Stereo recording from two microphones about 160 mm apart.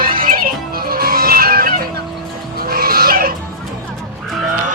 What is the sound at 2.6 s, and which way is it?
Livestock, 70° right (ahead or behind).